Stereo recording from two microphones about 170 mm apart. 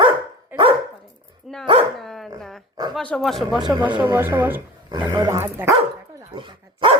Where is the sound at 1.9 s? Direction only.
Centre (ahead or behind).